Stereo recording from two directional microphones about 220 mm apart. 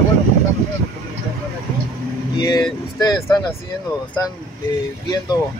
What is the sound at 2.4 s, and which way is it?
Speech, 20° left (ahead or behind).